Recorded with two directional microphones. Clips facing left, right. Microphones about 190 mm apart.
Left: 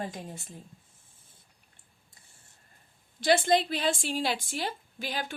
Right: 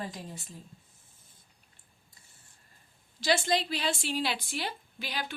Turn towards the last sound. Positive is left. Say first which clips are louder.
# left 3 dB
turn(degrees=45)  # may be behind; listen again after turning